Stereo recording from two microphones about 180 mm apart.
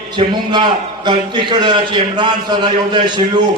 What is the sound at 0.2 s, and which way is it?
A man's voice, 30° right (ahead or behind).